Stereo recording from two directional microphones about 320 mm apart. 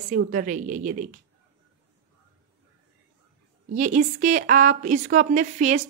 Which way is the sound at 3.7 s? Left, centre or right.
Right.